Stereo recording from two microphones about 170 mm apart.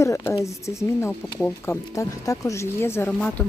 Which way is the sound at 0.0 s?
20° left (ahead or behind).